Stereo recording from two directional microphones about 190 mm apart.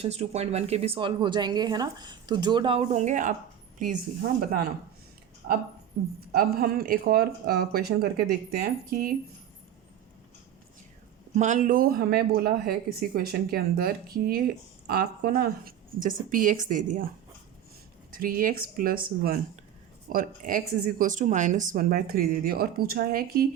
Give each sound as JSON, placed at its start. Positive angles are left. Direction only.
{"t": 0.0, "sound": "speech", "side_deg": -35}
{"t": 5.4, "sound": "speech", "side_deg": -45}
{"t": 11.3, "sound": "speech", "side_deg": -40}
{"t": 18.1, "sound": "speech", "side_deg": -50}